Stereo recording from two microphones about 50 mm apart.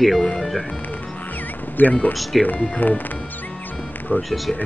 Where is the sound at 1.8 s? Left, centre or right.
Left.